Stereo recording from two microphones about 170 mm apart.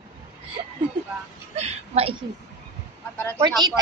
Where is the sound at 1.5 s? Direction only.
40° right (ahead or behind).